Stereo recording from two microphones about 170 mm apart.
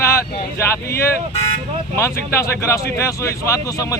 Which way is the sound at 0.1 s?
15° left (ahead or behind).